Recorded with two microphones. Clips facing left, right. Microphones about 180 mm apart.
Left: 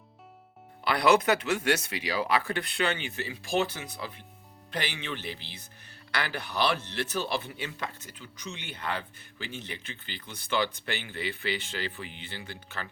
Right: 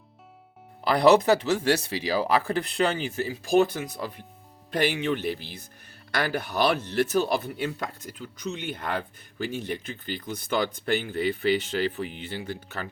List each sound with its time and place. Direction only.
0.9 s speech: 35° right (ahead or behind)